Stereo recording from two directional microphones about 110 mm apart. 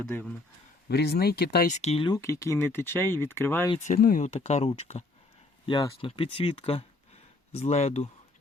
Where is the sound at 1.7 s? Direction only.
85° left.